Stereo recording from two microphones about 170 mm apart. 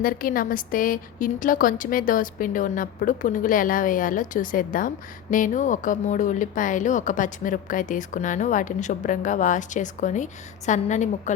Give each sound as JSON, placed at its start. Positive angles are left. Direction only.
{"t": 0.0, "sound": "speech", "side_deg": 55}